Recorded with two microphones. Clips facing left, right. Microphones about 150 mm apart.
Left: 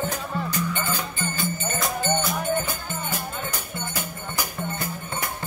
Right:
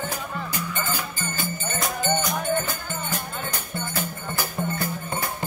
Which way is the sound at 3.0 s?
10° left (ahead or behind).